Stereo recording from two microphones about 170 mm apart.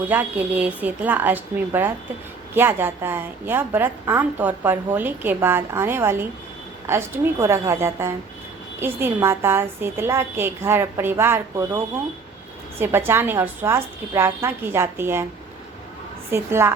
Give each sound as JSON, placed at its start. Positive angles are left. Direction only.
{"t": 0.1, "sound": "a woman's voice", "side_deg": -10}
{"t": 12.8, "sound": "a woman's voice", "side_deg": -15}
{"t": 16.3, "sound": "a woman's voice", "side_deg": -15}